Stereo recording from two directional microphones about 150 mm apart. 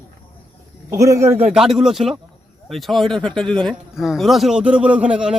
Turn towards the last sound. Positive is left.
turn(degrees=-5)  # may be behind; listen again after turning